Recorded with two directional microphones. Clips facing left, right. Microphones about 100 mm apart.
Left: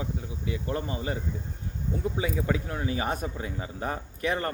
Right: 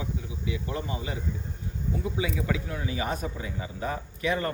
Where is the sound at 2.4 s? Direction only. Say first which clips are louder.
Left 2 dB; 40° left (ahead or behind).